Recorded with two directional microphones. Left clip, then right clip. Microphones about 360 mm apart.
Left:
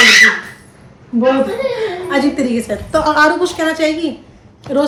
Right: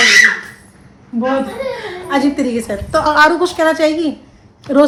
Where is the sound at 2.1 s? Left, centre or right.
Centre.